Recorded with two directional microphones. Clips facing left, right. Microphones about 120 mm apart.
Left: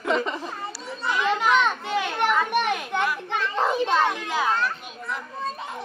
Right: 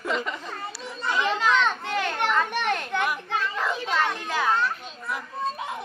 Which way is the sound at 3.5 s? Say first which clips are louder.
Left 8 dB; 25° left (ahead or behind).